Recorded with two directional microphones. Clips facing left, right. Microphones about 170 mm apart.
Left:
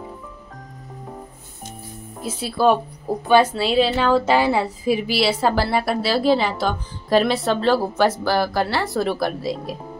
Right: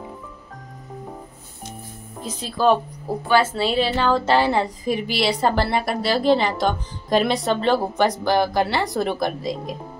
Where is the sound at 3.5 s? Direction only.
5° left (ahead or behind).